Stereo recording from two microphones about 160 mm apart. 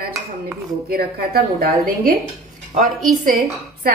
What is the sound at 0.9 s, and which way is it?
A woman's voice, 70° right (ahead or behind).